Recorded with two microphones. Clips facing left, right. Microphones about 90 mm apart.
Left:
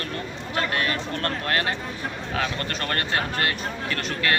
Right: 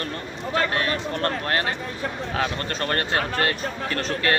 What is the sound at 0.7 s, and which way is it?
Speech, 30° right (ahead or behind).